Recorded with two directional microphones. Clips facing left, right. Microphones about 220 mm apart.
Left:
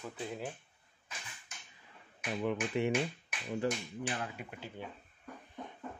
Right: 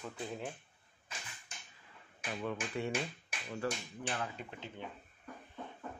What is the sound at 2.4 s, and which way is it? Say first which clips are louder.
Speech: left 5 dB; 15° left (ahead or behind).